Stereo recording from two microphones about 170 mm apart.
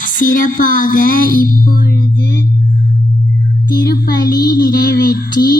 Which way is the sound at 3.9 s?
65° left (ahead or behind).